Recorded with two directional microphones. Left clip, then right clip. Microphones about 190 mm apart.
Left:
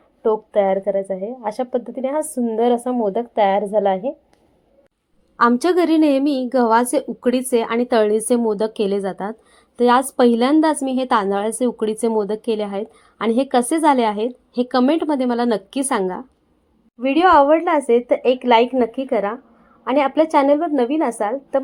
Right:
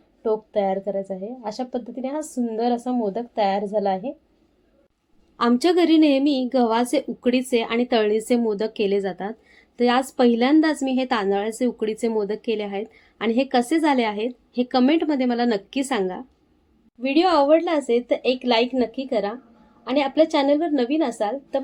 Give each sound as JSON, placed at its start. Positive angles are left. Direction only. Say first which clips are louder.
{"t": 0.2, "sound": "a woman's voice", "louder": "left 5 dB", "side_deg": 15}
{"t": 5.4, "sound": "a woman's voice", "louder": "left 3 dB", "side_deg": 10}